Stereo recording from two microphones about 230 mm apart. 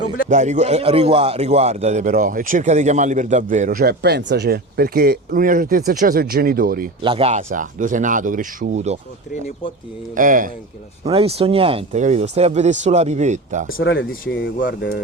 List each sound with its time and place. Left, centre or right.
0.3 s a man's voice: right
7.0 s a man's voice: right
10.2 s a man's voice: right
11.0 s speech: right
13.7 s speech: left